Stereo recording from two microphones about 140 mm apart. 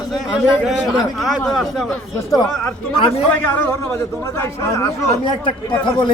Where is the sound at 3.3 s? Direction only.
15° left (ahead or behind).